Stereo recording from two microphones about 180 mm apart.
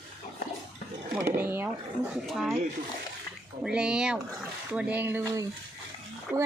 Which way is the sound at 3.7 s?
5° right (ahead or behind).